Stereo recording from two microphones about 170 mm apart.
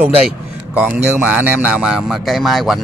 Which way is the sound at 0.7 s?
10° right (ahead or behind).